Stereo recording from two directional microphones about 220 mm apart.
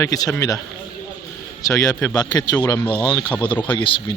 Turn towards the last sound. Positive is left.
turn(degrees=25)  # may be behind; listen again after turning